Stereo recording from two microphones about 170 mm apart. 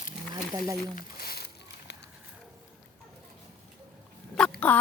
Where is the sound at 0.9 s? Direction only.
60° left (ahead or behind).